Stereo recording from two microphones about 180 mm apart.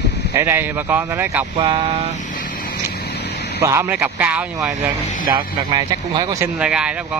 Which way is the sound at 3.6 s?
15° right (ahead or behind).